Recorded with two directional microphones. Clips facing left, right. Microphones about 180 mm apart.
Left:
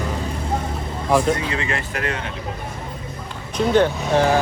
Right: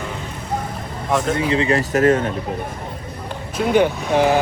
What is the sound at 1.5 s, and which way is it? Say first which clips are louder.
Speech: right 8 dB; 35° right (ahead or behind).